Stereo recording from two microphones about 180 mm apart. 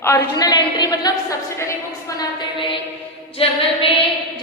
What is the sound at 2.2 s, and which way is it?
Speech, 30° left (ahead or behind).